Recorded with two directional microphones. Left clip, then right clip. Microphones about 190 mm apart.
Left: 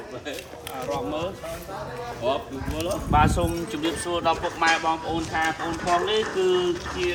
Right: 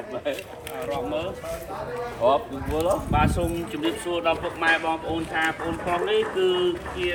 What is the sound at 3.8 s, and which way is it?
Speech, 20° left (ahead or behind).